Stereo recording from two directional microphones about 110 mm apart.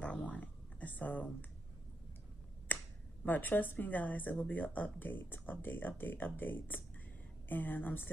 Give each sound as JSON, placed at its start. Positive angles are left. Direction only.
{"t": 0.0, "sound": "a sound", "side_deg": 10}
{"t": 2.7, "sound": "finger snapping", "side_deg": 15}
{"t": 3.3, "sound": "speech", "side_deg": 15}